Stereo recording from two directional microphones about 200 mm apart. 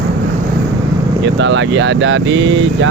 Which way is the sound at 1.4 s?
65° right (ahead or behind).